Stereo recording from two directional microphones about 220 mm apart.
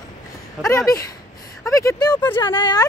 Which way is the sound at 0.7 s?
15° left (ahead or behind).